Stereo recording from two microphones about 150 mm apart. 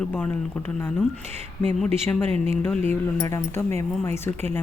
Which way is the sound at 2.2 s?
40° right (ahead or behind).